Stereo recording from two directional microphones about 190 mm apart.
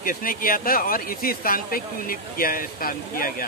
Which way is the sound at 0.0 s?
50° left (ahead or behind).